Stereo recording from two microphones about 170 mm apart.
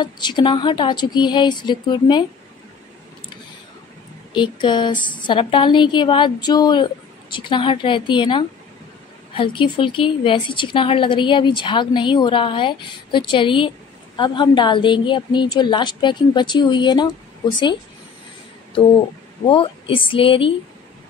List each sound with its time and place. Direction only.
0.0 s a woman's voice: 25° left (ahead or behind)
4.3 s a woman's voice: 30° left (ahead or behind)
19.4 s a woman's voice: 30° left (ahead or behind)